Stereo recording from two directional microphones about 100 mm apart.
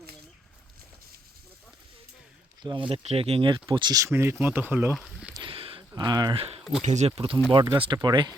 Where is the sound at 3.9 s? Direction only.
30° right (ahead or behind).